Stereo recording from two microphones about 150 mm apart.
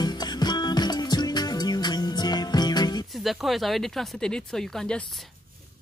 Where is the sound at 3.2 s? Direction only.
Centre (ahead or behind).